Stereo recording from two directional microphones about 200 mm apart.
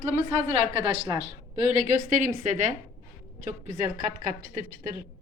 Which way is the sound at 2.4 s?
40° right (ahead or behind).